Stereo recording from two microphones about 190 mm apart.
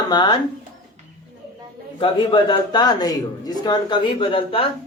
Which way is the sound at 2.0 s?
25° left (ahead or behind).